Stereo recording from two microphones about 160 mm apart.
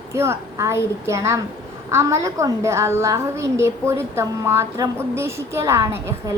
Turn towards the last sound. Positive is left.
turn(degrees=-20)  # may be behind; listen again after turning